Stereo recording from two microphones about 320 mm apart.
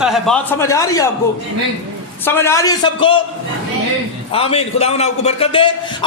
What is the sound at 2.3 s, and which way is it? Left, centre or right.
Speech, centre.